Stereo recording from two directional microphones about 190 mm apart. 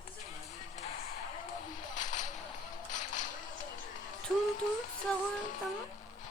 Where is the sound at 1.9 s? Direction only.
40° left (ahead or behind).